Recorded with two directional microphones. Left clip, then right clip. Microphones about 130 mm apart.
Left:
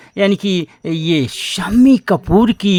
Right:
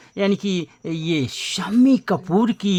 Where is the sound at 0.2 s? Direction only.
30° left (ahead or behind).